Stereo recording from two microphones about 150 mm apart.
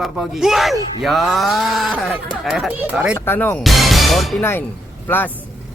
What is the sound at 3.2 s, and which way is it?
Speech, 15° left (ahead or behind).